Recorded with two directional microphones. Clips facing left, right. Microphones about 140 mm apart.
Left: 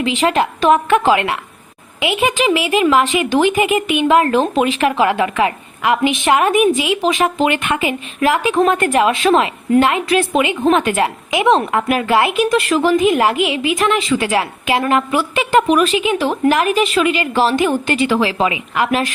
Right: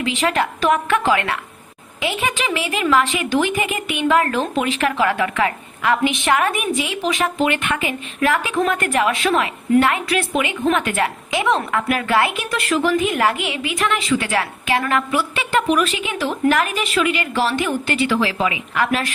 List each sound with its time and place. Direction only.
0.0 s a woman's voice: 20° left (ahead or behind)